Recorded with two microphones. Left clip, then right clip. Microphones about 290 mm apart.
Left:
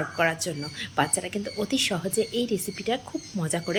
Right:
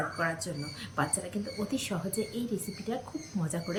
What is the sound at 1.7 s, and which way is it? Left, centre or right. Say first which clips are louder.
Speech: left 14 dB; centre.